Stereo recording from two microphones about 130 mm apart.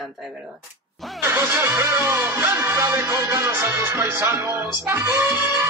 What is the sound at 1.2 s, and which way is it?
Music, 20° right (ahead or behind).